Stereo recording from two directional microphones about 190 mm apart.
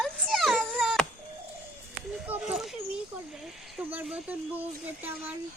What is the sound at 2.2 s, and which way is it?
A woman's voice, 5° right (ahead or behind).